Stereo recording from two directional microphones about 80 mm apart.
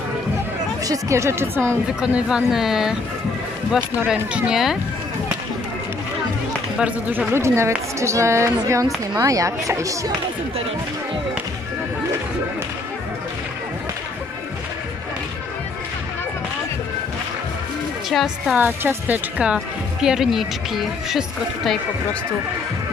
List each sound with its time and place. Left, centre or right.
0.8 s a woman's voice: right
2.0 s speech: centre
4.1 s speech: centre
7.3 s a woman's voice: right
18.1 s speech: centre
18.6 s speech: right; by 21.7 s centre